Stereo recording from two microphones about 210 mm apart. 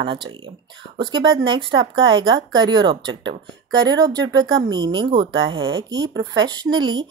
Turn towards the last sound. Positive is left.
turn(degrees=-20)  # may be behind; listen again after turning